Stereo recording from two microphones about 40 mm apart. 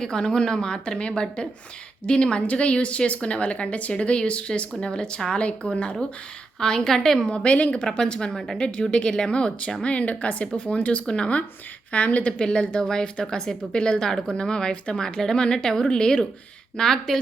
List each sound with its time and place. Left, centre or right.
0.0 s a woman's voice: centre
6.6 s a woman's voice: centre
7.3 s a woman's voice: left
7.8 s a woman's voice: centre
8.3 s a woman's voice: centre
8.5 s a woman's voice: left
11.0 s a woman's voice: left
11.9 s speech: left
12.4 s a woman's voice: left